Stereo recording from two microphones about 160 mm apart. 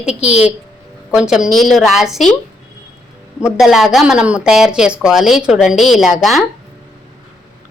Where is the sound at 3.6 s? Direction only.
Centre (ahead or behind).